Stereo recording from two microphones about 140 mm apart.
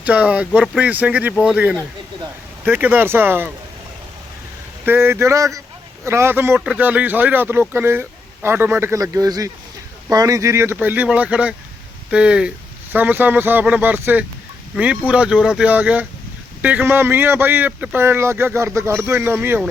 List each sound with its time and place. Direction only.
0.0 s speech: 10° right (ahead or behind)
4.9 s speech: 15° right (ahead or behind)